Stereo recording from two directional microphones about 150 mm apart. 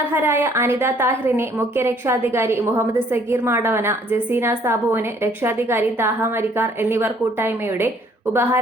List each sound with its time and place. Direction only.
0.1 s a woman's voice: 15° right (ahead or behind)